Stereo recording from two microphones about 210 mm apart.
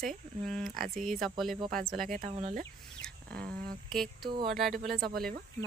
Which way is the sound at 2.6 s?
5° left (ahead or behind).